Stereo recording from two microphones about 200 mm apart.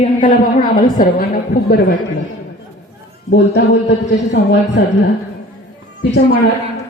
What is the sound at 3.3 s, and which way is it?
Speech, 60° left (ahead or behind).